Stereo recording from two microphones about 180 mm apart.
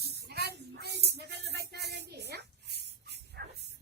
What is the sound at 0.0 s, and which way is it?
Music, 65° right (ahead or behind).